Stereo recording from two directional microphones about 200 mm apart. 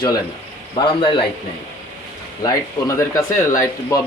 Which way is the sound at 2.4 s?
15° left (ahead or behind).